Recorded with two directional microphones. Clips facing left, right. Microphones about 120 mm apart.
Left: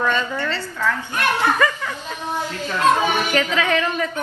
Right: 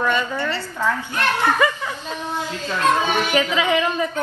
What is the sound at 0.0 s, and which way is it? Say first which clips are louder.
Speech: even; 15° right (ahead or behind).